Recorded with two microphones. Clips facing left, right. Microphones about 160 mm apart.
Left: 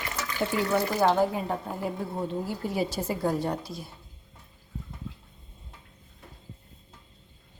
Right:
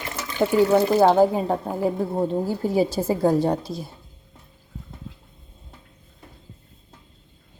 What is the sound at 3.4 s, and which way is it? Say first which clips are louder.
Speech: right 8 dB; 90° right.